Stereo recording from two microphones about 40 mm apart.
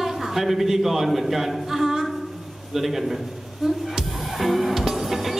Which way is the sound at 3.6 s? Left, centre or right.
Centre.